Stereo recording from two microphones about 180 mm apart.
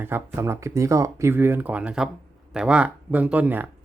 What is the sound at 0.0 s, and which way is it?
Speech, 10° right (ahead or behind).